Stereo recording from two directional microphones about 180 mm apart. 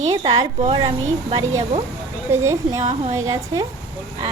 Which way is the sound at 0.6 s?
30° right (ahead or behind).